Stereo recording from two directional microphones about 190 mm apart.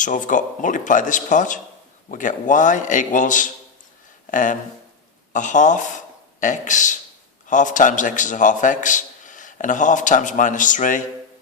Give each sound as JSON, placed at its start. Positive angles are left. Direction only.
{"t": 0.0, "sound": "a man's voice", "side_deg": 40}
{"t": 4.3, "sound": "a sound", "side_deg": 40}
{"t": 5.3, "sound": "a man's voice", "side_deg": 40}